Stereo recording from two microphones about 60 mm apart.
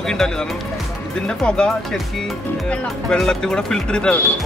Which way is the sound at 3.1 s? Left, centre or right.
Centre.